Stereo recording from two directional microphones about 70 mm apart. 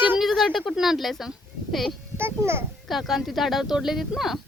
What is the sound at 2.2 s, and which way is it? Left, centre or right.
Speech, right.